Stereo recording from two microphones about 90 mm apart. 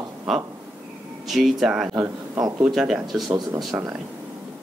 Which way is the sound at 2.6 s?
5° right (ahead or behind).